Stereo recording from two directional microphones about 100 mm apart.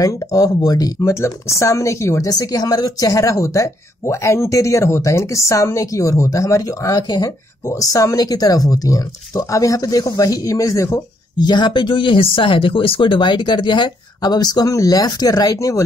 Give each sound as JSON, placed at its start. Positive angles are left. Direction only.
{"t": 0.0, "sound": "speech", "side_deg": 35}
{"t": 11.3, "sound": "speech", "side_deg": 50}